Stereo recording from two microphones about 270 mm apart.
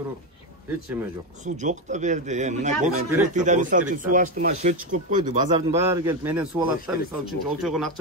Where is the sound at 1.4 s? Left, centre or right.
Right.